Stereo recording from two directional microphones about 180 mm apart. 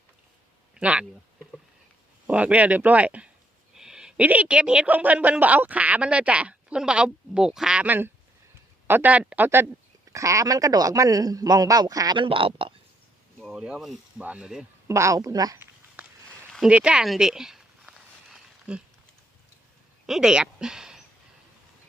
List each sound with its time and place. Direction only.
0.7 s speech: 5° right (ahead or behind)
2.2 s a woman's voice: 10° right (ahead or behind); by 12.7 s 30° right (ahead or behind)
13.4 s speech: 5° right (ahead or behind)
14.8 s a woman's voice: 15° right (ahead or behind)
16.0 s a sound: 10° right (ahead or behind)
16.4 s a sound: centre (ahead or behind)
20.1 s speech: centre (ahead or behind)